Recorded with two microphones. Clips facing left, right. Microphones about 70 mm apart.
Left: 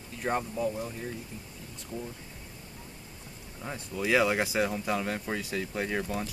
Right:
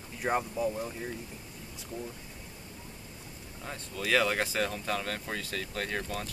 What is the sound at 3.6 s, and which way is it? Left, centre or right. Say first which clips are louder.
Speech: left 3 dB; centre.